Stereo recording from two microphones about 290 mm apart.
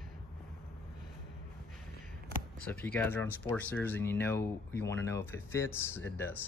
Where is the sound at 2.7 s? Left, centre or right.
Centre.